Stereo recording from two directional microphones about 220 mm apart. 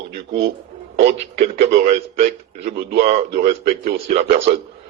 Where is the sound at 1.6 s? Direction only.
45° right (ahead or behind).